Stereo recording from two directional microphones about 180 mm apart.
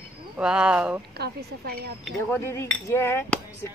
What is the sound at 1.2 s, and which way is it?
Speech, 60° right (ahead or behind).